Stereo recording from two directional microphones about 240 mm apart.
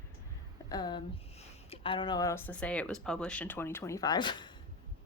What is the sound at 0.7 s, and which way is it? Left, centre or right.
A woman's voice, centre.